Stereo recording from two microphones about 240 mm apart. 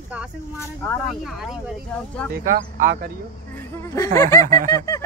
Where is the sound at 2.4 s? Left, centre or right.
Right.